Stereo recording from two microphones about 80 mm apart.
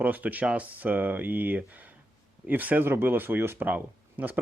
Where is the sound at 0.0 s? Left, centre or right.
Centre.